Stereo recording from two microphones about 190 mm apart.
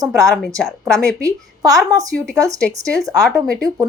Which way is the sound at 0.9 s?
20° right (ahead or behind).